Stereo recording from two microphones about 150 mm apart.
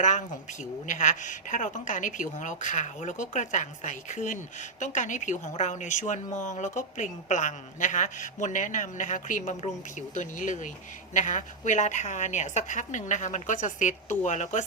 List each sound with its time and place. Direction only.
0.0 s a woman's voice: 55° left (ahead or behind)